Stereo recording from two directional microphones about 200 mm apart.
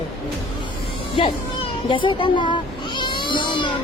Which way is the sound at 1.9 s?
25° left (ahead or behind).